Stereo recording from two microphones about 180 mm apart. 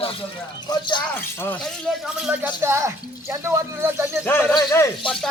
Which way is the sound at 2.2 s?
10° right (ahead or behind).